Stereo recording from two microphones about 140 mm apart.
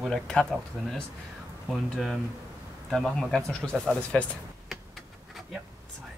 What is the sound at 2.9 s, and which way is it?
Speech, 5° left (ahead or behind).